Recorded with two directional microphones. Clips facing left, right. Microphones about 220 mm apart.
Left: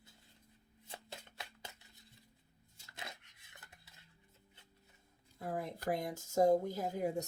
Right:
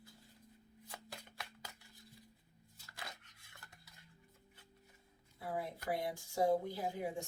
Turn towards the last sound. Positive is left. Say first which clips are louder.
# left 4 dB
turn(degrees=45)  # may be behind; listen again after turning